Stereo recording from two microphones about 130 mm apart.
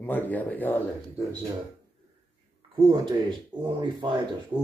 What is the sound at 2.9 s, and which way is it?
Speech, 35° right (ahead or behind).